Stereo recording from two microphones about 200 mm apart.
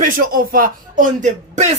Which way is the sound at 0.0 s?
45° right (ahead or behind).